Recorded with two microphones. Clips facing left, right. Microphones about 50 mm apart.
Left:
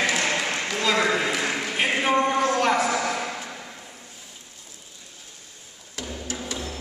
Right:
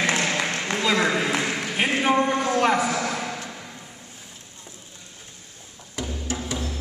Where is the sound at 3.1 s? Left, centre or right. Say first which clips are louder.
Left 1 dB; centre.